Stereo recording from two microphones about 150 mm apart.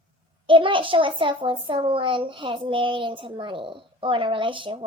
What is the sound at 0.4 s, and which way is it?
A child's voice, 35° right (ahead or behind).